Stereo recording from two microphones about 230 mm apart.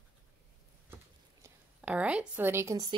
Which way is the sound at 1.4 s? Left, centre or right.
Centre.